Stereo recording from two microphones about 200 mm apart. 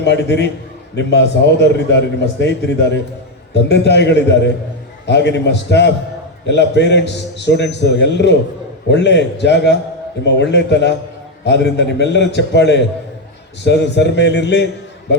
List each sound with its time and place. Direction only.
0.0 s a man's voice: 60° left (ahead or behind)